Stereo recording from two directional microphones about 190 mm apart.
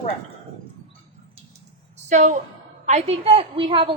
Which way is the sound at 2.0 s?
40° right (ahead or behind).